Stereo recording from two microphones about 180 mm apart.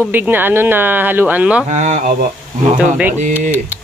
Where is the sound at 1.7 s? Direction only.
40° right (ahead or behind).